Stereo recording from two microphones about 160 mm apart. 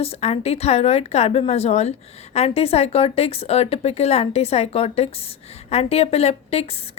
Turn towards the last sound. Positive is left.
turn(degrees=40)  # may be behind; listen again after turning